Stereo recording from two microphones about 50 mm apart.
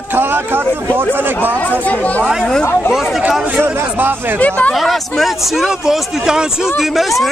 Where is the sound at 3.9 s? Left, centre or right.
Right.